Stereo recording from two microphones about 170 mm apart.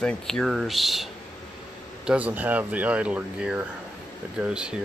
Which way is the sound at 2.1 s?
10° right (ahead or behind).